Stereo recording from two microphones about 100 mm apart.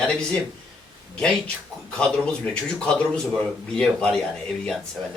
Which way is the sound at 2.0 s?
10° left (ahead or behind).